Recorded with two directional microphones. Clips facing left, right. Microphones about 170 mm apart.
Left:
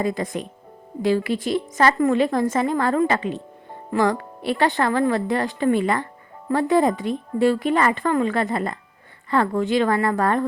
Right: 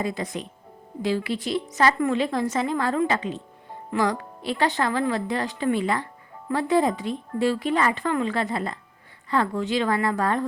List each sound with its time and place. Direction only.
0.0 s a woman's voice: 50° left (ahead or behind)